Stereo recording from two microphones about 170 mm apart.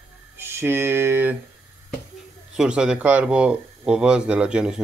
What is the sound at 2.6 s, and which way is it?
Speech, 5° right (ahead or behind).